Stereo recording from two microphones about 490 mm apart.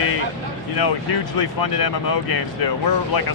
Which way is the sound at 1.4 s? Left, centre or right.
Left.